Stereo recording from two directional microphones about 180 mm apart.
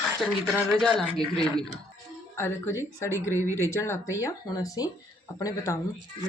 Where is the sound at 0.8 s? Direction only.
Centre (ahead or behind).